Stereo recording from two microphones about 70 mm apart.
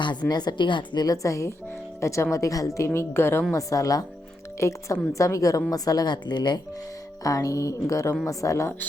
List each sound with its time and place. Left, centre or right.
0.0 s a woman's voice: left
3.5 s a woman's voice: left
4.6 s a woman's voice: left
7.3 s a woman's voice: left